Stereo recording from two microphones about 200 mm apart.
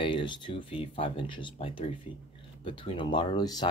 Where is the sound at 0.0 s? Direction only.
25° left (ahead or behind).